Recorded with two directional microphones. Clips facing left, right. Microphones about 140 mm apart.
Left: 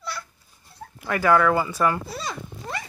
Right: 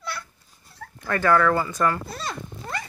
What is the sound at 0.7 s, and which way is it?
Speech, 10° left (ahead or behind).